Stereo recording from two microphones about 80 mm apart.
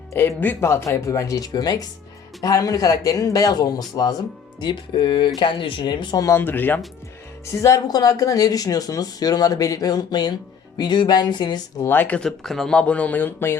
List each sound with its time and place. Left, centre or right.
0.1 s speech: left
4.6 s speech: left
6.3 s speech: left
7.4 s speech: left
10.8 s music: left
11.9 s speech: left
12.4 s speech: centre; by 13.6 s left